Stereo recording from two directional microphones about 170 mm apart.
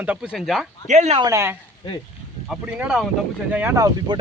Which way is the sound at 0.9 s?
40° right (ahead or behind).